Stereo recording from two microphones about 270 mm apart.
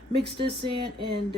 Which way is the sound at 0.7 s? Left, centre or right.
Centre.